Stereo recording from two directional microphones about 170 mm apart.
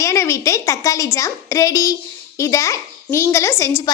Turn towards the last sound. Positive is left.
turn(degrees=15)  # may be behind; listen again after turning